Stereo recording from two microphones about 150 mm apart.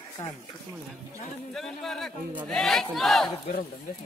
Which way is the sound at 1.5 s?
5° left (ahead or behind).